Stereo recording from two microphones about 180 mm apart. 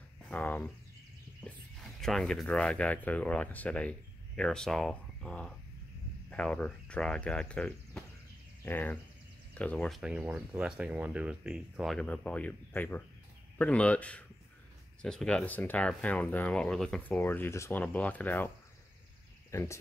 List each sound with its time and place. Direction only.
0.3 s speech: 10° left (ahead or behind)
19.5 s speech: 15° left (ahead or behind)